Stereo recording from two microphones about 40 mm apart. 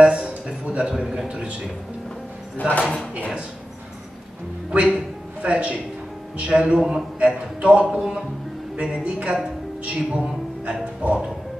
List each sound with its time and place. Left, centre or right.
0.0 s a sound: right
1.3 s speech: right
2.8 s speech: left
4.6 s speech: right
8.7 s a woman's voice: right
10.6 s a woman's voice: right